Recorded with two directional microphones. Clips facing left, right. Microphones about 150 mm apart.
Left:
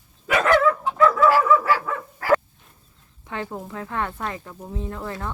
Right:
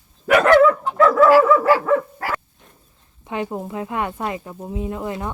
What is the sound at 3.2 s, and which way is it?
Speech, 20° right (ahead or behind).